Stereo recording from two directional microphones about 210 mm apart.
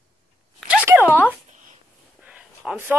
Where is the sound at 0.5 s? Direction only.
5° right (ahead or behind).